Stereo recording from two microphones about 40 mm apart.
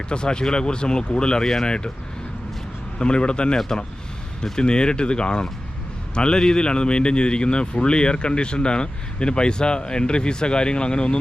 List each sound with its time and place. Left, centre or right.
0.1 s a man's voice: left
3.0 s a man's voice: left